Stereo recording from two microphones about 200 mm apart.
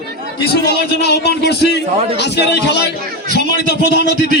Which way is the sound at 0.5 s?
55° left (ahead or behind).